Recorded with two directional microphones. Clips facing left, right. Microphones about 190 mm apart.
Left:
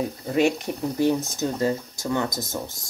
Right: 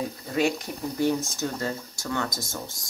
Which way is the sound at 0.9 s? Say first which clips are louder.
Left 2 dB; 20° left (ahead or behind).